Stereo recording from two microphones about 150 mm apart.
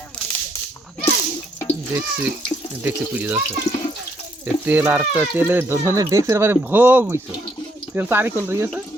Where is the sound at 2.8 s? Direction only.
10° right (ahead or behind).